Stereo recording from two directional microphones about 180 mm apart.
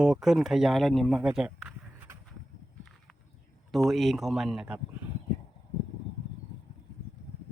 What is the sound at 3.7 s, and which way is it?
A man's voice, centre (ahead or behind).